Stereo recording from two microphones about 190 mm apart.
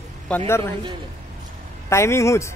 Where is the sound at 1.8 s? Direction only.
15° left (ahead or behind).